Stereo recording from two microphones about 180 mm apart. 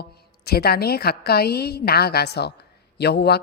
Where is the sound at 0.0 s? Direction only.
60° left (ahead or behind).